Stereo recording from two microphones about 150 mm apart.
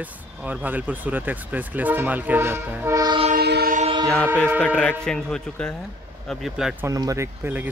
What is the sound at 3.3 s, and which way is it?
Train, 90° right.